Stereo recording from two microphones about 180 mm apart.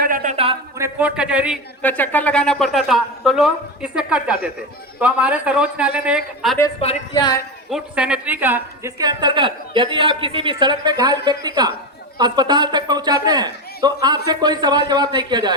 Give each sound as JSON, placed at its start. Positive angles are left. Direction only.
{"t": 0.0, "sound": "a sound", "side_deg": -50}
{"t": 0.8, "sound": "a man's voice", "side_deg": -10}
{"t": 1.8, "sound": "a man's voice", "side_deg": 10}
{"t": 7.1, "sound": "a woman's voice", "side_deg": 20}
{"t": 7.7, "sound": "a woman's voice", "side_deg": -5}